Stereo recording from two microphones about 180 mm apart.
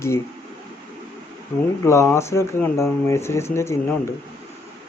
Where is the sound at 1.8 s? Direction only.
15° left (ahead or behind).